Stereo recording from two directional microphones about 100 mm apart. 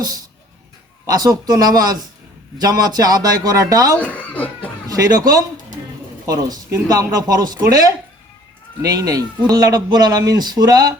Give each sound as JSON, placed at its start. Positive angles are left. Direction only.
{"t": 0.0, "sound": "speech", "side_deg": -40}
{"t": 4.0, "sound": "speech", "side_deg": 15}
{"t": 4.9, "sound": "speech", "side_deg": -40}